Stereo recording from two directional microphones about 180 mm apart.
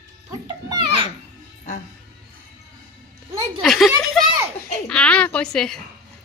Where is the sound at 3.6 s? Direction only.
Centre (ahead or behind).